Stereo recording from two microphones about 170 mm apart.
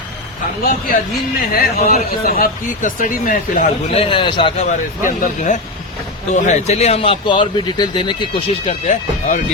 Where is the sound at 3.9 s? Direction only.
35° left (ahead or behind).